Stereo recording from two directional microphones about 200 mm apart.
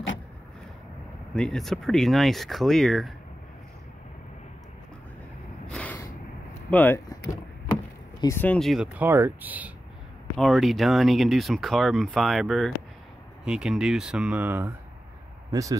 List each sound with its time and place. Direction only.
1.3 s speech: 5° left (ahead or behind)
5.7 s snort: 5° left (ahead or behind)
6.7 s speech: 10° left (ahead or behind); by 15.8 s 15° right (ahead or behind)